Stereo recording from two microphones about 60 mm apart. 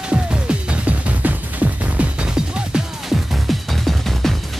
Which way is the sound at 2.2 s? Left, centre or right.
Centre.